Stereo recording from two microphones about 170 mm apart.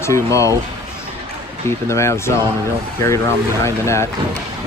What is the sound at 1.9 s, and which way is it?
Speech, 15° left (ahead or behind).